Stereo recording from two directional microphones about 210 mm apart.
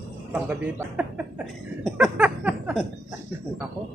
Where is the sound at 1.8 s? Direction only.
5° right (ahead or behind).